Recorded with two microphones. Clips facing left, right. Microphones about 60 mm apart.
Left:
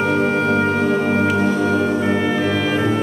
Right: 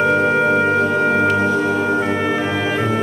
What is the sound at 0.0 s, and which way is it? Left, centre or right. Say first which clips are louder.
Music: right 3 dB; centre.